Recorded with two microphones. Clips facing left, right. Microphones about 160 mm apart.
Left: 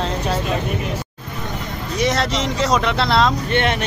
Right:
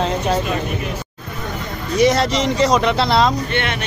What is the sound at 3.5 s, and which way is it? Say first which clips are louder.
Speech: left 3 dB; 40° left (ahead or behind).